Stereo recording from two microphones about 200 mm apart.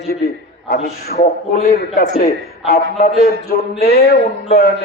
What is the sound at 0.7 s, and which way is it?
A man's voice, 50° left (ahead or behind).